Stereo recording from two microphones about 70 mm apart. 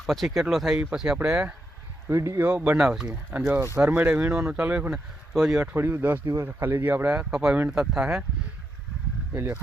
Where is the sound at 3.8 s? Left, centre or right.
Right.